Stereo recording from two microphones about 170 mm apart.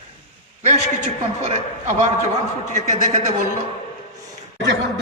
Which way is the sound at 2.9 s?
45° right (ahead or behind).